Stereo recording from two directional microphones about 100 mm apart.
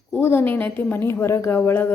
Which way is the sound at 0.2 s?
20° left (ahead or behind).